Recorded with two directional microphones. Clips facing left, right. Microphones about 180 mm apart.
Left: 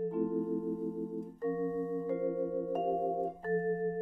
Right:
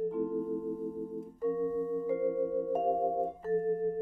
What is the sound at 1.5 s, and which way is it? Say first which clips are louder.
Singing bowl: right 1 dB; 5° right (ahead or behind).